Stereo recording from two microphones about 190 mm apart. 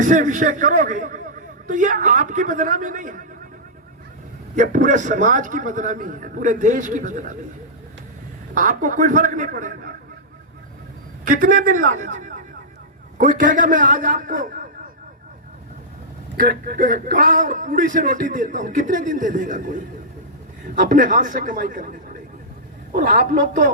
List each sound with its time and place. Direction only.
0.0 s speech: 40° right (ahead or behind)
4.5 s speech: 40° right (ahead or behind)
8.5 s speech: 45° right (ahead or behind)
11.3 s speech: 45° right (ahead or behind)
16.4 s speech: 50° right (ahead or behind)